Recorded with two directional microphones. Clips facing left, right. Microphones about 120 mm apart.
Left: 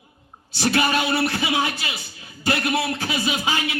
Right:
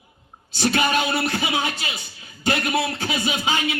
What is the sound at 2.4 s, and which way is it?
Speech, 30° right (ahead or behind).